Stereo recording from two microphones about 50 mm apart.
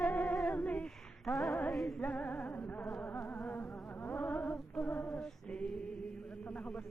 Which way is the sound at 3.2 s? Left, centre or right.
Left.